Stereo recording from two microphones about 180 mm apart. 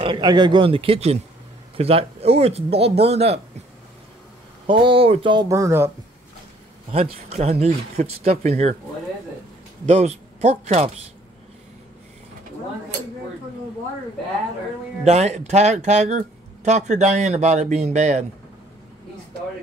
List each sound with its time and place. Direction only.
0.0 s speech: 25° right (ahead or behind)
4.6 s speech: 30° right (ahead or behind)
6.9 s speech: 35° right (ahead or behind)
9.8 s speech: 35° right (ahead or behind)
15.0 s speech: 40° right (ahead or behind)